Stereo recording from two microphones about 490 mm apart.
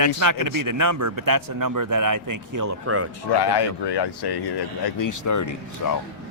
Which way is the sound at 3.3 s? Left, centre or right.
Left.